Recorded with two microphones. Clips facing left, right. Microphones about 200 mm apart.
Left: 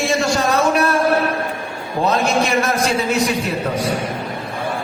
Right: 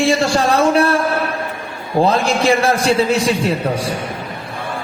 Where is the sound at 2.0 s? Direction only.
30° right (ahead or behind).